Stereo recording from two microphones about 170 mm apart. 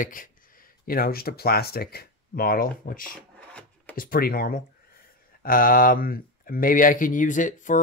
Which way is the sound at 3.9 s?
60° left (ahead or behind).